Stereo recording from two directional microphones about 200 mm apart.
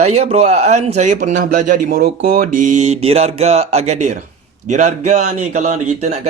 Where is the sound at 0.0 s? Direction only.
35° right (ahead or behind).